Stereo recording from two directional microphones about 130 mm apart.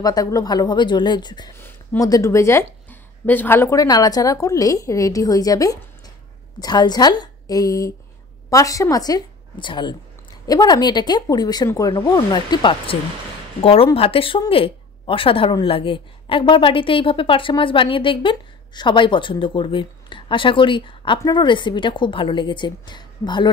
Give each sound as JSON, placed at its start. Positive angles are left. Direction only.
{"t": 0.0, "sound": "a woman's voice", "side_deg": 30}
{"t": 1.6, "sound": "a sound", "side_deg": 20}
{"t": 2.0, "sound": "a woman's voice", "side_deg": 25}